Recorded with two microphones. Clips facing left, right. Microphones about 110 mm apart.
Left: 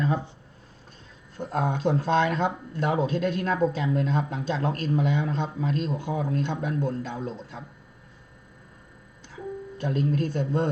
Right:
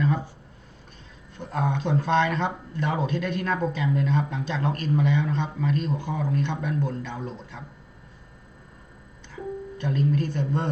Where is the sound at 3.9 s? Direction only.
40° left (ahead or behind).